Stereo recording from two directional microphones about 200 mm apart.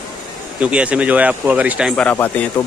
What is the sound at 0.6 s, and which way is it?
Speech, 5° right (ahead or behind).